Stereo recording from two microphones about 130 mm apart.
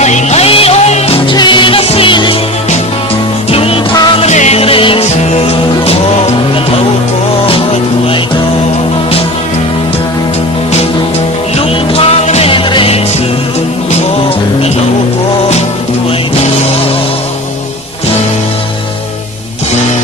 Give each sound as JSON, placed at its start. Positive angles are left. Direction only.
{"t": 0.0, "sound": "music", "side_deg": 60}
{"t": 1.3, "sound": "music", "side_deg": 35}
{"t": 3.5, "sound": "music", "side_deg": 45}
{"t": 4.2, "sound": "music", "side_deg": 60}
{"t": 11.5, "sound": "music", "side_deg": 50}